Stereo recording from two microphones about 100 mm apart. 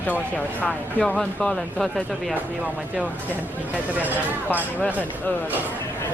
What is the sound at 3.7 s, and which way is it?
Speech, 15° right (ahead or behind).